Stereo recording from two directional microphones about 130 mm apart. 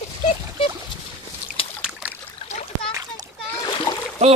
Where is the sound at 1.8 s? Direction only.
10° right (ahead or behind).